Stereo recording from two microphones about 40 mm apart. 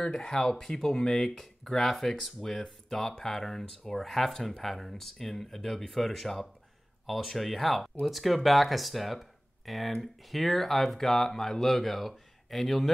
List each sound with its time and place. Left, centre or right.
0.0 s speech: left; by 12.9 s centre